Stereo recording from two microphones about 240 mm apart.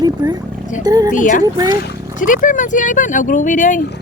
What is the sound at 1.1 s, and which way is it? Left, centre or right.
Speech, left.